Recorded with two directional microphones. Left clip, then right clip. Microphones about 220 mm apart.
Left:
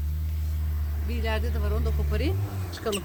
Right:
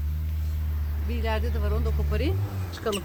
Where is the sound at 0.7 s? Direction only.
45° left (ahead or behind).